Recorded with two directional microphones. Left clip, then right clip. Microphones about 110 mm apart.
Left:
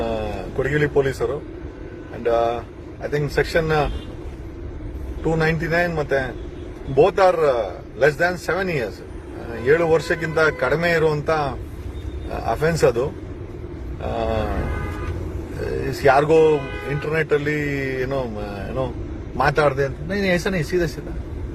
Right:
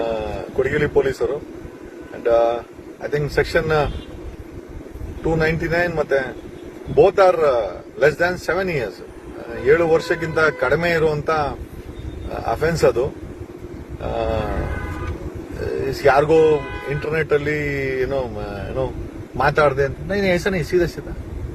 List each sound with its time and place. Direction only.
0.0 s a sound: 25° left (ahead or behind)
2.2 s a man's voice: 25° left (ahead or behind)
5.2 s a man's voice: 25° left (ahead or behind)
14.0 s wild animals: 25° left (ahead or behind)
15.6 s a man's voice: 25° left (ahead or behind)